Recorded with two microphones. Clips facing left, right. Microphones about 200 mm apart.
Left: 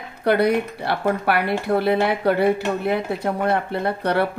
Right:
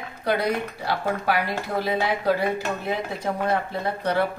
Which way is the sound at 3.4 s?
65° left (ahead or behind).